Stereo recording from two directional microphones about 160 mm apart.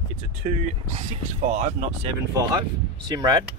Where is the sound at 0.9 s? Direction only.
40° right (ahead or behind).